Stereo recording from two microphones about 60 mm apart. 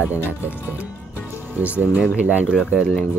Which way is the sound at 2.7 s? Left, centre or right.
Centre.